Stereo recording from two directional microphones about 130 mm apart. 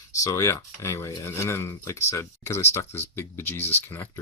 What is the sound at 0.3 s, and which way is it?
Speech, 25° left (ahead or behind).